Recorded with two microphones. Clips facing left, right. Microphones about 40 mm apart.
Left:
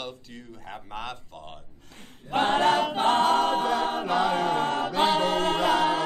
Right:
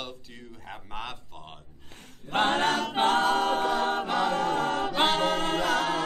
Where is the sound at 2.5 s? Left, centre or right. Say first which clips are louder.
Left 4 dB; centre.